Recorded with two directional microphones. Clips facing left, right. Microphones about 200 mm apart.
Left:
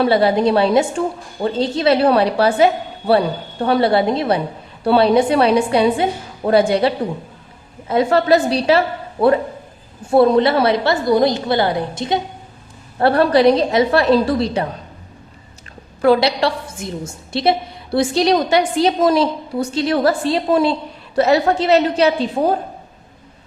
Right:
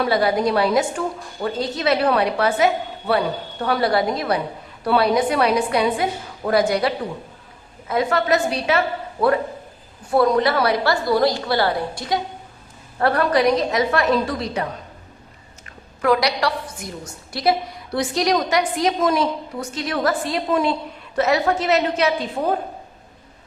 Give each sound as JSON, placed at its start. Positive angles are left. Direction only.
{"t": 0.0, "sound": "a woman's voice", "side_deg": 30}
{"t": 10.1, "sound": "a woman's voice", "side_deg": 25}
{"t": 16.0, "sound": "a woman's voice", "side_deg": 30}